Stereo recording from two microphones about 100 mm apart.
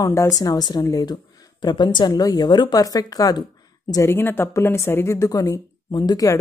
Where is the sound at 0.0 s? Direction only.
30° left (ahead or behind).